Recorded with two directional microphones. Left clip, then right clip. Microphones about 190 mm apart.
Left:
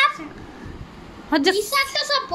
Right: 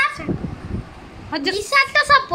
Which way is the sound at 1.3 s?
35° left (ahead or behind).